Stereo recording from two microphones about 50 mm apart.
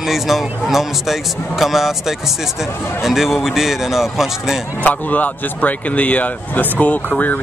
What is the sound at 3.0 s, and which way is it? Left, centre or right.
Speech, centre.